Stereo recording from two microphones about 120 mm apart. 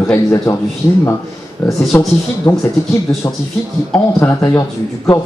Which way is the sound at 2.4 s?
25° left (ahead or behind).